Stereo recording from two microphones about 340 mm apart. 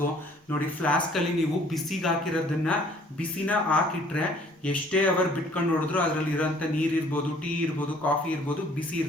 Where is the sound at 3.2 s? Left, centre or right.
Centre.